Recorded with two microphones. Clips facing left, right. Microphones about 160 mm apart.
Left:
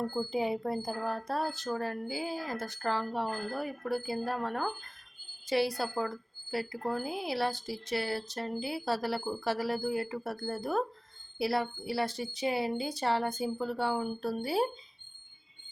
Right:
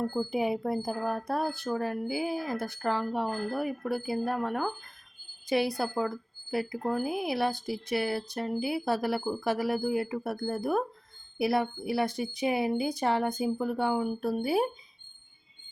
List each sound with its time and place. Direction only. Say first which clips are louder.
0.3 s a woman's voice: right 2 dB; 15° right (ahead or behind)